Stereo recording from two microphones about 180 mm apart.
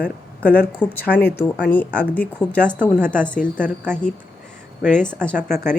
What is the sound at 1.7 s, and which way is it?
A woman's voice, 10° left (ahead or behind).